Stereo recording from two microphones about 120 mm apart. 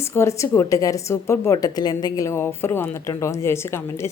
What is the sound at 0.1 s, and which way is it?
A woman's voice, 25° left (ahead or behind).